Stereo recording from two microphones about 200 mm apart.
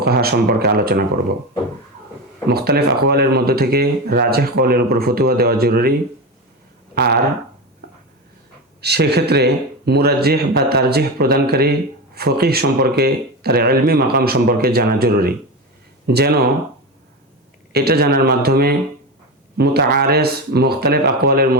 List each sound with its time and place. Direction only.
0.0 s speech: 50° right (ahead or behind)
2.5 s speech: 50° right (ahead or behind)
6.9 s a sound: 50° right (ahead or behind)
8.8 s speech: 55° right (ahead or behind)
17.7 s speech: 50° right (ahead or behind)